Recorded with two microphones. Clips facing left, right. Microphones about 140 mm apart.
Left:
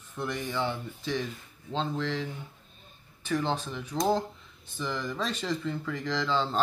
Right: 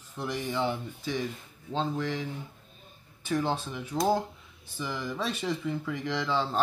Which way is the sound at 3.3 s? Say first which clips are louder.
Even; 10° right (ahead or behind).